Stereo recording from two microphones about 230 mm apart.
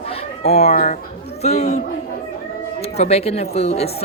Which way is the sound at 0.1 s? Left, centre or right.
Left.